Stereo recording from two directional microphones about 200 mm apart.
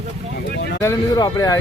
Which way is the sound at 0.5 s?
55° left (ahead or behind).